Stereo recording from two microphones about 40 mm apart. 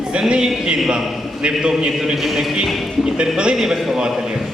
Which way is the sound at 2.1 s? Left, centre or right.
Centre.